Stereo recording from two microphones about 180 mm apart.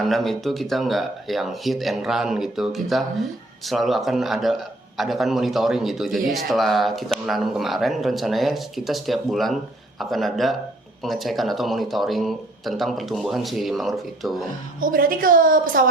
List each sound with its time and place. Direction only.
0.0 s speech: centre (ahead or behind)
14.8 s a woman's voice: 50° right (ahead or behind)